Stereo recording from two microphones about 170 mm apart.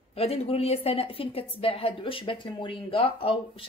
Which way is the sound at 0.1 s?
35° left (ahead or behind).